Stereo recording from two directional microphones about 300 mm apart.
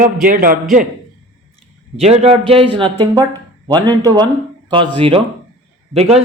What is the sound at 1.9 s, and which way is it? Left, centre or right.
A man's voice, right.